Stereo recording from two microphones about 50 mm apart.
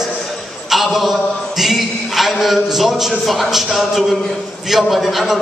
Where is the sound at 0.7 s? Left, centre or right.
Centre.